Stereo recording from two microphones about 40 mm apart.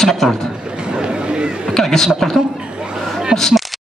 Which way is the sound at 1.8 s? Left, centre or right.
Centre.